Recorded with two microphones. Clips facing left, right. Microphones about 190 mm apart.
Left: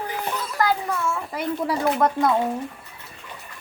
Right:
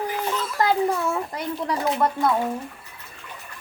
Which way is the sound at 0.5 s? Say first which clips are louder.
Right 2 dB; 30° right (ahead or behind).